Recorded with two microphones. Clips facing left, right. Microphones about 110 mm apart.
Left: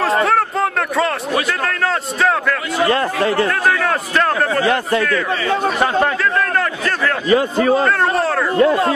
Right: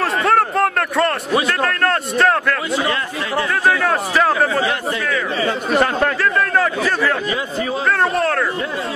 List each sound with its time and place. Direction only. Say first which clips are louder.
0.2 s a sound: right 1 dB; centre (ahead or behind)
1.6 s a man's voice: right 1 dB; centre (ahead or behind)
2.9 s speech: left 6 dB; 40° left (ahead or behind)
3.8 s a man's voice: right 1 dB; 5° right (ahead or behind)
6.5 s a man's voice: right 2 dB; 5° right (ahead or behind)
7.2 s a man's voice: left 8 dB; 55° left (ahead or behind)
8.2 s a man's voice: even; 5° left (ahead or behind)
8.5 s a man's voice: left 10 dB; 65° left (ahead or behind)